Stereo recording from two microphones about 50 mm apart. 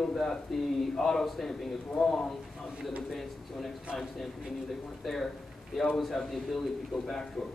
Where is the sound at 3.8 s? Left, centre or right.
Centre.